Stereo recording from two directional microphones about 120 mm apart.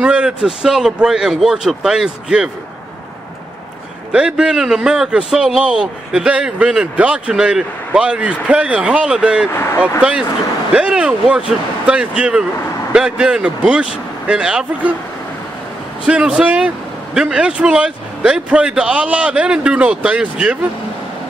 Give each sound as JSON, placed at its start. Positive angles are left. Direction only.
{"t": 0.0, "sound": "speech", "side_deg": -10}
{"t": 4.1, "sound": "a man's voice", "side_deg": -10}
{"t": 16.1, "sound": "a man's voice", "side_deg": -10}